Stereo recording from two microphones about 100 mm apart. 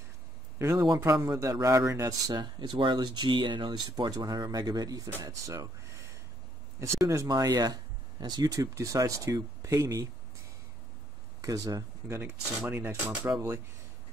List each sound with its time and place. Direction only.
0.7 s speech: 40° right (ahead or behind)
2.3 s speech: 50° right (ahead or behind); by 10.0 s 30° right (ahead or behind)
11.4 s speech: 35° right (ahead or behind)
12.2 s speech: 20° right (ahead or behind)